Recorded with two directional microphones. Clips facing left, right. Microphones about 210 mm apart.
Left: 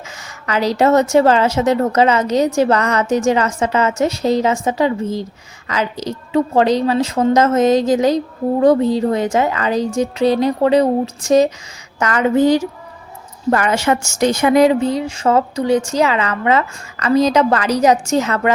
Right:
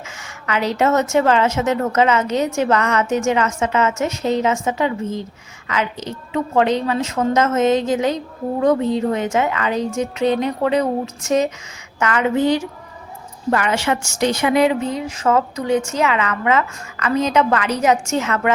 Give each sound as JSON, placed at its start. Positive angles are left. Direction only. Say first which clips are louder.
{"t": 0.2, "sound": "a woman's voice", "louder": "left 3 dB", "side_deg": 35}